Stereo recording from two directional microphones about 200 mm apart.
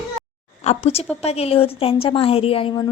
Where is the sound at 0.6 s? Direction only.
30° left (ahead or behind).